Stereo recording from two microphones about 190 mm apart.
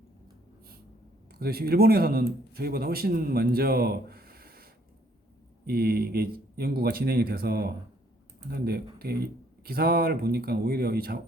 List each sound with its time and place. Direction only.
1.3 s speech: 55° right (ahead or behind)